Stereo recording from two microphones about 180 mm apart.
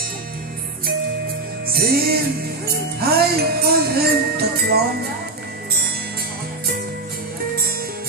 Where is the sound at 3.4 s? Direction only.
60° right (ahead or behind).